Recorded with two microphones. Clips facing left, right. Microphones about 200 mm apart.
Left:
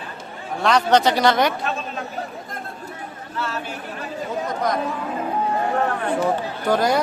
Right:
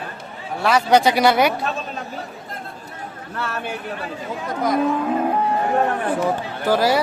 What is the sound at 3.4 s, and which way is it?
Speech, 60° right (ahead or behind).